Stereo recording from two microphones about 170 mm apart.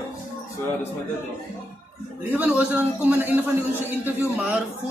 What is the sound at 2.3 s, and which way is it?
A man's voice, 10° right (ahead or behind).